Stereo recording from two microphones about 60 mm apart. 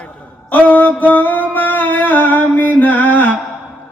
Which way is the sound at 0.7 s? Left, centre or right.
Left.